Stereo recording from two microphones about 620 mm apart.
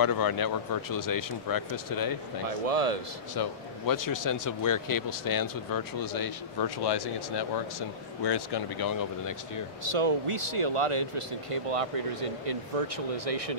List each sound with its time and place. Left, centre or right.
0.0 s speech: left
2.6 s speech: right
3.3 s speech: left
9.8 s speech: right